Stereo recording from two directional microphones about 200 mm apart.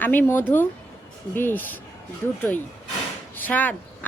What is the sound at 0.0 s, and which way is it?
Speech, 10° left (ahead or behind).